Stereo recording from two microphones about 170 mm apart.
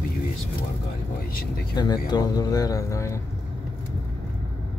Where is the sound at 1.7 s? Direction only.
25° left (ahead or behind).